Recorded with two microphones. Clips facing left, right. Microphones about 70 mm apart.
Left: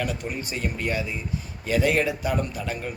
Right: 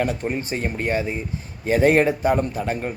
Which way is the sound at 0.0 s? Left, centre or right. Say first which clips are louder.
Right 6 dB; right.